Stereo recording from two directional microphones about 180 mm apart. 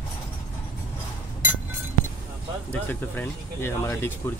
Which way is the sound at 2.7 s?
10° left (ahead or behind).